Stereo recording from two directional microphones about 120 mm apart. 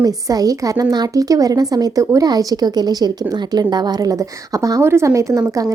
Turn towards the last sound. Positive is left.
turn(degrees=-25)  # may be behind; listen again after turning